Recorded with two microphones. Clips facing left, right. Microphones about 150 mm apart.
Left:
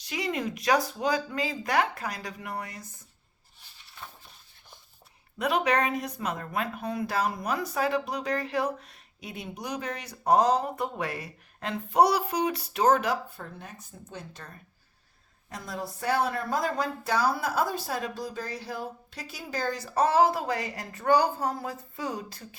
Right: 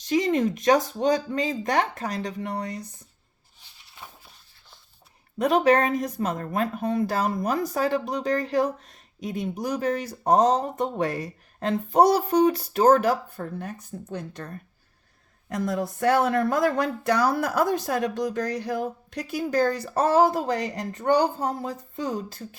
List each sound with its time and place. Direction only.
0.1 s speech: 40° right (ahead or behind)
4.0 s a sound: 15° right (ahead or behind)
5.4 s a woman's voice: 45° right (ahead or behind); by 16.7 s 80° right
17.2 s speech: 65° right (ahead or behind); by 21.8 s 35° right (ahead or behind)